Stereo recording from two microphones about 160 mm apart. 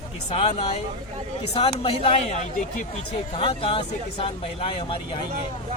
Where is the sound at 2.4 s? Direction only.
55° left (ahead or behind).